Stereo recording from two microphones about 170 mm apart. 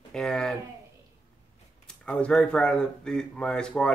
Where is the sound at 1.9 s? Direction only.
5° left (ahead or behind).